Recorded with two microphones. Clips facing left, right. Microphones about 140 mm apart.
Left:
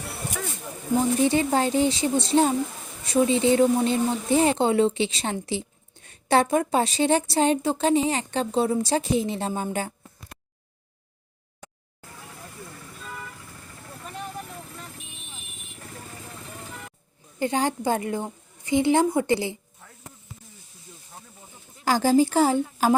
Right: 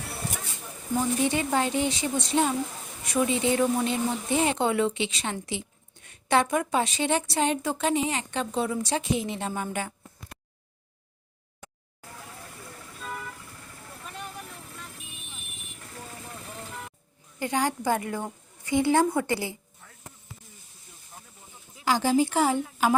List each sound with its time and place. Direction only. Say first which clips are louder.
0.9 s a woman's voice: left 4 dB; 30° left (ahead or behind)
9.7 s a sound: left 3 dB; 35° left (ahead or behind)
17.4 s a woman's voice: left 3 dB; 25° left (ahead or behind)
21.8 s a woman's voice: left 4 dB; 40° left (ahead or behind)